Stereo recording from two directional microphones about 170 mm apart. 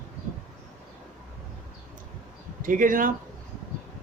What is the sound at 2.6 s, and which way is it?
Speech, 50° right (ahead or behind).